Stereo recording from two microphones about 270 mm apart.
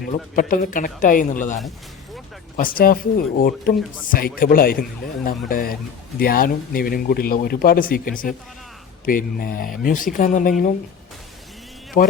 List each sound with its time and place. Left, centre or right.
0.0 s speech: left
2.6 s speech: left
12.0 s speech: left